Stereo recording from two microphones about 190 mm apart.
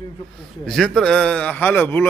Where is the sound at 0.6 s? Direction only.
Centre (ahead or behind).